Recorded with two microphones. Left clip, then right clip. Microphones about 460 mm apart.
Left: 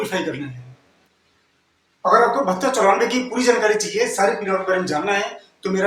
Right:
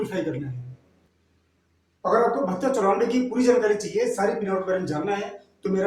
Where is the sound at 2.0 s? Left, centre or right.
Right.